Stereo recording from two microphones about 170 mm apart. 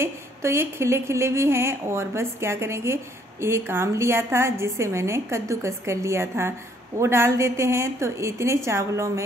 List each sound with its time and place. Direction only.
0.0 s speech: 15° right (ahead or behind)